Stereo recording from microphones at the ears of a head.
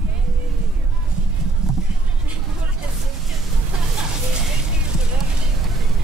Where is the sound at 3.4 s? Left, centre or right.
Right.